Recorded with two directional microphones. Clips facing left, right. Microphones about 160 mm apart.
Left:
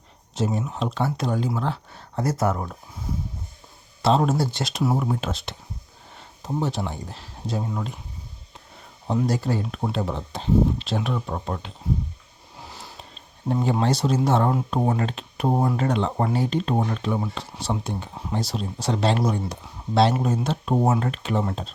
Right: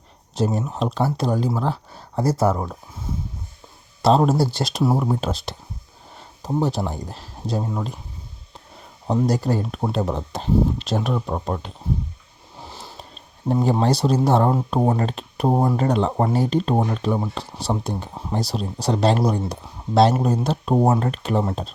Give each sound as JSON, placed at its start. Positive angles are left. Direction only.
{"t": 0.3, "sound": "speech", "side_deg": -35}
{"t": 4.0, "sound": "speech", "side_deg": -35}
{"t": 9.0, "sound": "speech", "side_deg": -40}
{"t": 12.6, "sound": "sniff", "side_deg": -30}
{"t": 13.5, "sound": "speech", "side_deg": -35}